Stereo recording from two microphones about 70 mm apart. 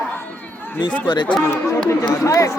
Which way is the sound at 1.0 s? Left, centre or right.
Left.